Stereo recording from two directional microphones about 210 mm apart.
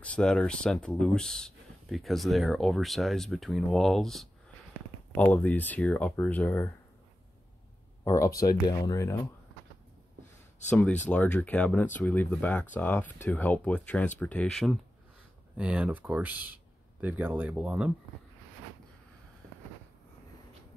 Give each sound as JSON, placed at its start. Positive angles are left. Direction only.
{"t": 0.0, "sound": "speech", "side_deg": 5}
{"t": 8.0, "sound": "speech", "side_deg": 15}
{"t": 10.7, "sound": "speech", "side_deg": 10}